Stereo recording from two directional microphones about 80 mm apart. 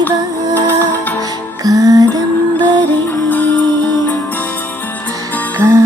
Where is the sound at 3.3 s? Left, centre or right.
Left.